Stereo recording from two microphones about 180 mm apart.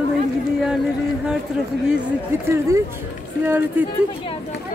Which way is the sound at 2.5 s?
15° right (ahead or behind).